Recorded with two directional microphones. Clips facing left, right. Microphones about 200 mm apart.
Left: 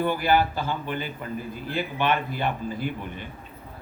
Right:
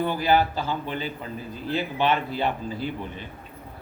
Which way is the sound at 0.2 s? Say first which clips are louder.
Right 1 dB; 55° left (ahead or behind).